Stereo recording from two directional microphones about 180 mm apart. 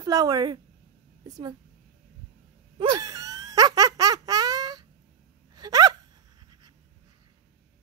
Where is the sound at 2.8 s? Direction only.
20° right (ahead or behind).